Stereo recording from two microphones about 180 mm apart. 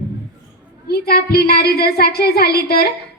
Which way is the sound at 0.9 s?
60° left (ahead or behind).